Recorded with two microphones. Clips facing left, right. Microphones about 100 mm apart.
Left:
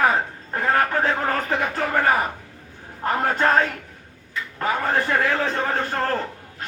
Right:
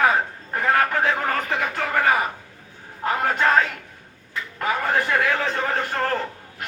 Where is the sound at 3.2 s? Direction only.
30° left (ahead or behind).